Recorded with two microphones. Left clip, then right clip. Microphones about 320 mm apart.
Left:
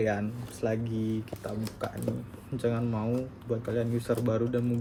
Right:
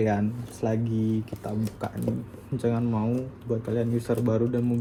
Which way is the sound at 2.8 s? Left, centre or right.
Centre.